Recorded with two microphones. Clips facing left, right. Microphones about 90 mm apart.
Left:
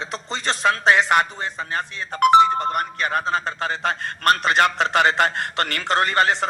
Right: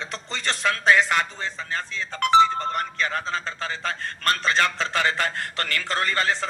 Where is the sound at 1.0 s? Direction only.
60° left (ahead or behind).